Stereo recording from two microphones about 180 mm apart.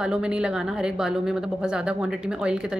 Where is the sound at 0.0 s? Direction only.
5° right (ahead or behind).